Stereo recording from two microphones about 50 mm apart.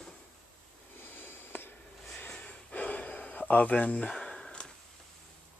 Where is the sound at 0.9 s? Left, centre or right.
Left.